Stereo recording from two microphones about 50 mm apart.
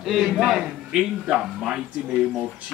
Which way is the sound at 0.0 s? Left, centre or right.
Centre.